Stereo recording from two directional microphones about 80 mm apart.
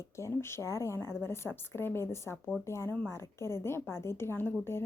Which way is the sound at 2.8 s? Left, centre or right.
Centre.